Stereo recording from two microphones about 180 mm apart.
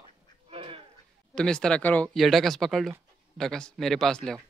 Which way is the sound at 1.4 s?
5° left (ahead or behind).